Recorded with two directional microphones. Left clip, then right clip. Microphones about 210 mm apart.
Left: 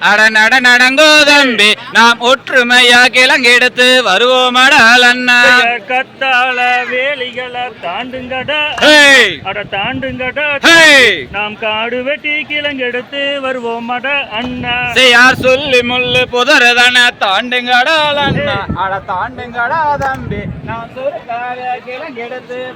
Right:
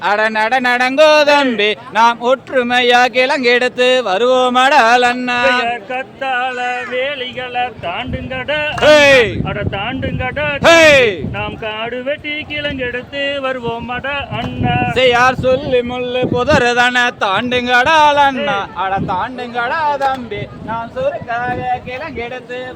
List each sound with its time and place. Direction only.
0.0 s a man's voice: 10° right (ahead or behind)
5.6 s speech: 40° left (ahead or behind)
8.8 s speech: centre (ahead or behind)
9.5 s speech: 40° left (ahead or behind)
10.6 s speech: centre (ahead or behind)
11.3 s speech: 40° left (ahead or behind)
14.9 s speech: centre (ahead or behind)
16.5 s speech: 20° right (ahead or behind); by 18.3 s 40° right (ahead or behind)
18.9 s speech: 30° right (ahead or behind)